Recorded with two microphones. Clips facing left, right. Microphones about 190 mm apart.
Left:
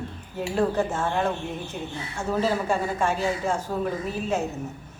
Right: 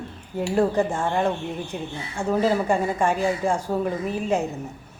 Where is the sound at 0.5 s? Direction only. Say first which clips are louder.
Right 3 dB; 15° right (ahead or behind).